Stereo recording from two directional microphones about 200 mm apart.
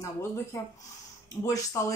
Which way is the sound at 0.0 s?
15° left (ahead or behind).